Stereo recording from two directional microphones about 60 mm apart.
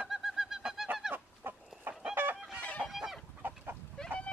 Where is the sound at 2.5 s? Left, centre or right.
Left.